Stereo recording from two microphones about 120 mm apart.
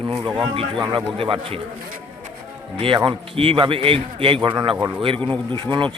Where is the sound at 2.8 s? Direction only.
45° right (ahead or behind).